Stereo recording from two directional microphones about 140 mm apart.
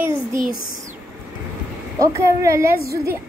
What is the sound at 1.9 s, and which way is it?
Speech, 20° right (ahead or behind).